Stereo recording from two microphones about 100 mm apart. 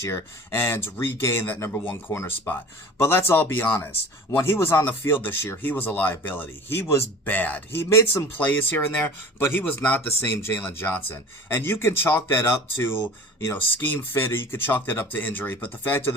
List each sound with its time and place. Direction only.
0.1 s speech: 25° left (ahead or behind)